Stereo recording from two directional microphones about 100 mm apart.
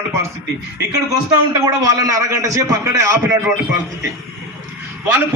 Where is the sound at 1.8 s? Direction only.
35° right (ahead or behind).